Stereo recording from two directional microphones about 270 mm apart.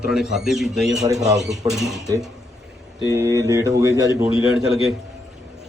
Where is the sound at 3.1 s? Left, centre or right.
Centre.